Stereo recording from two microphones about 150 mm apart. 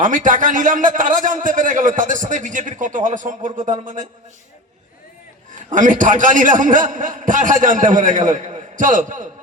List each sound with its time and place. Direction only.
0.0 s a man's voice: 60° right (ahead or behind)
5.7 s a man's voice: 60° right (ahead or behind)